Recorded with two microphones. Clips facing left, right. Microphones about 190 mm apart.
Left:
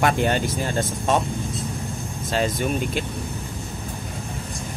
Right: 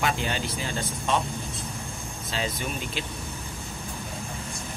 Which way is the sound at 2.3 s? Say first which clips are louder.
Left 8 dB; 50° left (ahead or behind).